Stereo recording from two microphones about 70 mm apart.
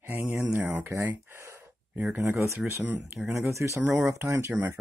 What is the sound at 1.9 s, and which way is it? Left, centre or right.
Speech, right.